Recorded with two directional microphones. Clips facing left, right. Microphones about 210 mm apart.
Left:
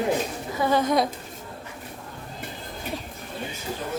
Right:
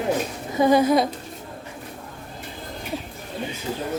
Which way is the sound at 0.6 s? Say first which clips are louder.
Right 6 dB; 10° right (ahead or behind).